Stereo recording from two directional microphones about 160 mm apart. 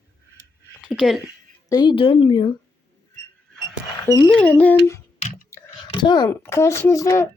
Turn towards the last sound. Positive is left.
turn(degrees=20)  # may be behind; listen again after turning